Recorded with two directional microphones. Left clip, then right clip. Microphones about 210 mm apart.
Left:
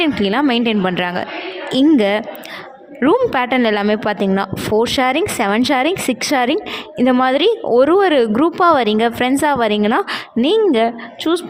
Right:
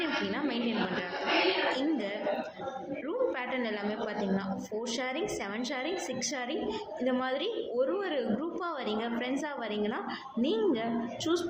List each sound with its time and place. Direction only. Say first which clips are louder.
0.0 s a woman's voice: left 16 dB; 50° left (ahead or behind)
1.7 s a woman's voice: left 19 dB; 55° left (ahead or behind)